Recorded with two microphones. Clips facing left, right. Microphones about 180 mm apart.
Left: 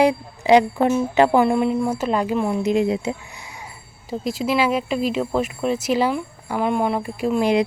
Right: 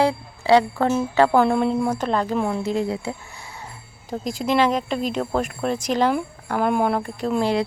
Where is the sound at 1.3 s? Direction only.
5° left (ahead or behind).